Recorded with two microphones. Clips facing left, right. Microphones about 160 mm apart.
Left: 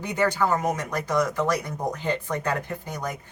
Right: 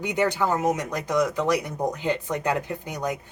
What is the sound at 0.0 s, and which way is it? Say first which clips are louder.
Speech: even; 15° right (ahead or behind).